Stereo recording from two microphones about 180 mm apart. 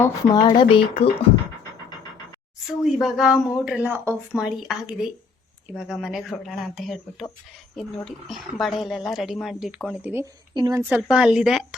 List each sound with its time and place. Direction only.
0.0 s speech: 20° left (ahead or behind)
2.8 s speech: centre (ahead or behind)
10.5 s speech: 20° right (ahead or behind); by 11.6 s centre (ahead or behind)